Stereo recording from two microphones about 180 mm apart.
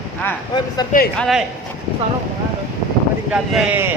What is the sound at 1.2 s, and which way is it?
Speech, centre (ahead or behind).